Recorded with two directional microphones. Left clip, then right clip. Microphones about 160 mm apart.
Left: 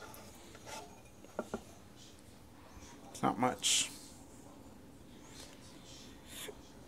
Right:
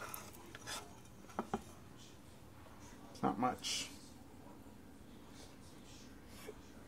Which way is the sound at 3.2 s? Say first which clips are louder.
Left 4 dB; 25° left (ahead or behind).